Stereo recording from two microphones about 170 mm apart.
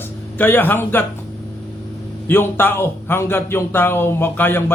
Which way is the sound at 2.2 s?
10° left (ahead or behind).